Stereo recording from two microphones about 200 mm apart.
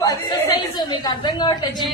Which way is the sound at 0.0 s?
15° left (ahead or behind).